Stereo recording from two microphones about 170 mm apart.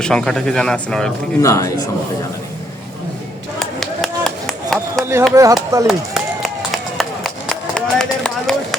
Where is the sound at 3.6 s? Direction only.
Centre (ahead or behind).